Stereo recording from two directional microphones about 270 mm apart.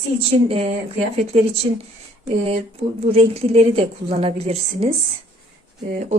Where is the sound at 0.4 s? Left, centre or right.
Right.